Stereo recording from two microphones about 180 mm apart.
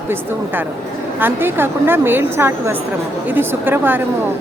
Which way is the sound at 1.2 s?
10° right (ahead or behind).